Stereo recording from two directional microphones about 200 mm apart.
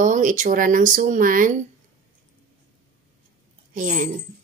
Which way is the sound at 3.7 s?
40° right (ahead or behind).